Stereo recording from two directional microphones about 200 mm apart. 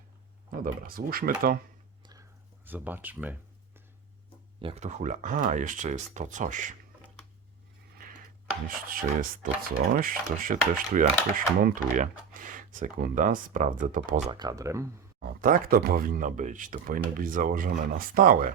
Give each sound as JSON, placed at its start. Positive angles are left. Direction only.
{"t": 0.6, "sound": "speech", "side_deg": -45}
{"t": 2.6, "sound": "speech", "side_deg": -10}
{"t": 4.6, "sound": "speech", "side_deg": -35}
{"t": 8.6, "sound": "speech", "side_deg": -45}
{"t": 14.3, "sound": "speech", "side_deg": -20}
{"t": 15.2, "sound": "speech", "side_deg": -45}